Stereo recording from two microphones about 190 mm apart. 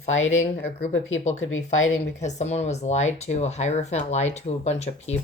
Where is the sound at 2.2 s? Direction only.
35° left (ahead or behind).